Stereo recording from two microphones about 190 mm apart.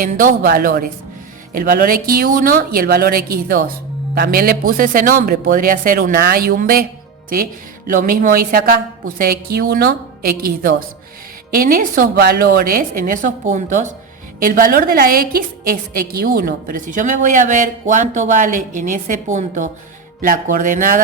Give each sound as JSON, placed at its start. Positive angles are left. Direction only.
{"t": 0.0, "sound": "a woman's voice", "side_deg": -45}
{"t": 7.9, "sound": "a woman's voice", "side_deg": -45}